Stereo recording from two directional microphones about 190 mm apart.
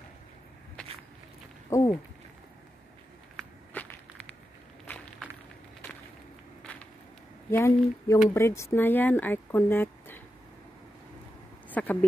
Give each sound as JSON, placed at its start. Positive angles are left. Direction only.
{"t": 1.7, "sound": "speech", "side_deg": 15}
{"t": 3.3, "sound": "walk", "side_deg": 5}
{"t": 6.6, "sound": "a sound", "side_deg": 5}
{"t": 7.5, "sound": "speech", "side_deg": 15}
{"t": 11.7, "sound": "speech", "side_deg": 10}